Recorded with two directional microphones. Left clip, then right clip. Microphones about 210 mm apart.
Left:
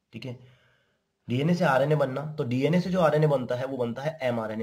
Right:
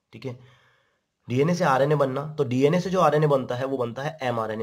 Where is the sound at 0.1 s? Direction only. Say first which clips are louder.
Right 4 dB; 30° right (ahead or behind).